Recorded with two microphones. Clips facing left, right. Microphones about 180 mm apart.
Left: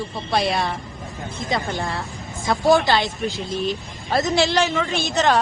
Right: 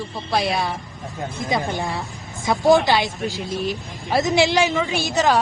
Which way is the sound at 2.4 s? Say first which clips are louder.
Right 1 dB; 20° right (ahead or behind).